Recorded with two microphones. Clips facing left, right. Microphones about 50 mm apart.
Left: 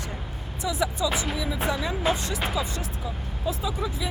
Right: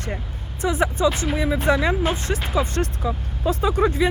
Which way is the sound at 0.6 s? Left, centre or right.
Right.